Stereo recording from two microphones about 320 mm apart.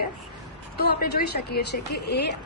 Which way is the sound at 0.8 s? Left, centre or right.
Left.